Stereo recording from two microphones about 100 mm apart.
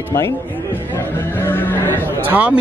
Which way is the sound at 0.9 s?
20° left (ahead or behind).